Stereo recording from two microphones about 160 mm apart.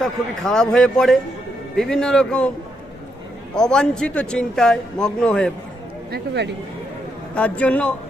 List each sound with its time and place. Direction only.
0.0 s a man's voice: 5° left (ahead or behind)
3.5 s a man's voice: 5° left (ahead or behind)
6.1 s speech: 90° right
7.3 s a man's voice: 10° left (ahead or behind)